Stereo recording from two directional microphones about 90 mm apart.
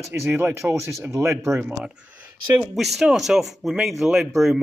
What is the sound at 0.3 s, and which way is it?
Speech, 20° right (ahead or behind).